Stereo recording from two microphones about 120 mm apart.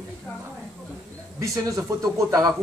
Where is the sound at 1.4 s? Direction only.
30° right (ahead or behind).